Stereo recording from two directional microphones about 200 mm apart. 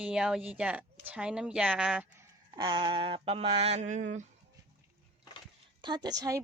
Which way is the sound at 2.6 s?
25° right (ahead or behind).